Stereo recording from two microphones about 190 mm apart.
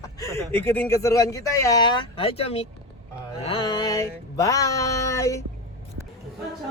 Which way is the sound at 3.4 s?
25° left (ahead or behind).